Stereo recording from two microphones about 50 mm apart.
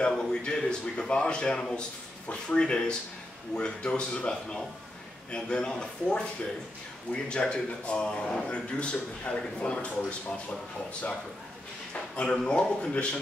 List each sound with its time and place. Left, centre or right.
0.2 s a man's voice: centre